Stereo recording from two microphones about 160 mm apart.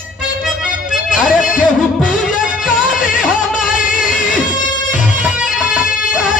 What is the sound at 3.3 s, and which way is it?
Music, 55° left (ahead or behind).